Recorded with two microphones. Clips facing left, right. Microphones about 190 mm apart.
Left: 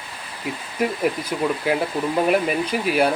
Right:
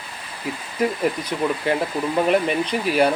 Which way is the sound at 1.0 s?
5° left (ahead or behind).